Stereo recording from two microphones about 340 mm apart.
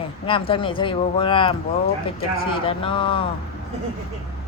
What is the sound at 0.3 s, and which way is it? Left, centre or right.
Speech, centre.